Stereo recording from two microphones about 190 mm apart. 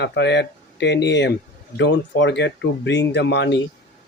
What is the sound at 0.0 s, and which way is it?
Speech, 65° left (ahead or behind).